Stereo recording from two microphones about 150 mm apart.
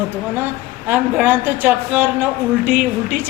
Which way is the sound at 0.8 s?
15° right (ahead or behind).